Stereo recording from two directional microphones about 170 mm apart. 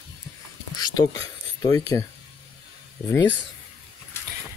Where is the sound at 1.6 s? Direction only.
20° left (ahead or behind).